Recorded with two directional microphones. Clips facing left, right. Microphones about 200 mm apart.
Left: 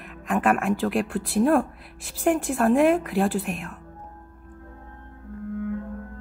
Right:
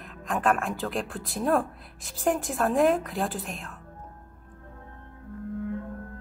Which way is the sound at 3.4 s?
15° left (ahead or behind).